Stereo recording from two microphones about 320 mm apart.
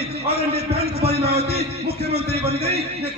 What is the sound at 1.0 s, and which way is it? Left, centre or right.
Speech, right.